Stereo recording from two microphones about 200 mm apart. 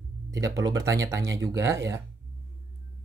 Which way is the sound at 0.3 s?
15° right (ahead or behind).